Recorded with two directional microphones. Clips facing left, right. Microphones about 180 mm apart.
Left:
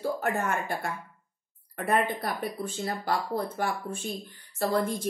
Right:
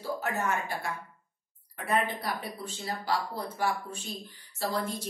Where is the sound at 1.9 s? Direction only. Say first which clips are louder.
Left 3 dB; 50° left (ahead or behind).